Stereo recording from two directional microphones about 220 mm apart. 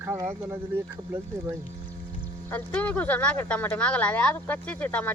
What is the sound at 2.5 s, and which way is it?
Speech, 5° left (ahead or behind).